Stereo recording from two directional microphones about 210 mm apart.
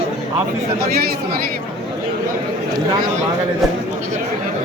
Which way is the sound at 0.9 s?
45° right (ahead or behind).